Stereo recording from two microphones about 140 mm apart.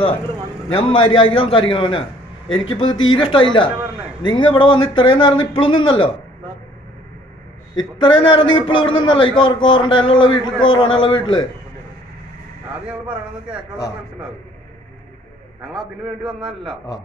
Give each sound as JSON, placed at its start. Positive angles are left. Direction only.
{"t": 0.7, "sound": "a man's voice", "side_deg": 40}
{"t": 7.7, "sound": "a man's voice", "side_deg": 35}
{"t": 12.8, "sound": "speech", "side_deg": -10}